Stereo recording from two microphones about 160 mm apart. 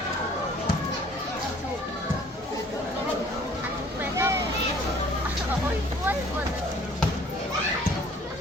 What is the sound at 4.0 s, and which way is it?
Vehicle, 15° right (ahead or behind).